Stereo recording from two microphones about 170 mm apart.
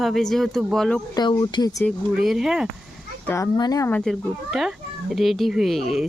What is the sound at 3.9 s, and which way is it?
Speech, 5° left (ahead or behind).